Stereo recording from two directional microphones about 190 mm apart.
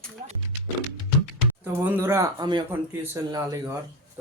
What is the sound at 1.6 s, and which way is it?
Speech, 10° right (ahead or behind).